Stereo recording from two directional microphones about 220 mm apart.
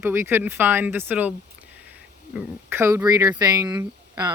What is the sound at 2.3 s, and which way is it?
Speech, 5° right (ahead or behind).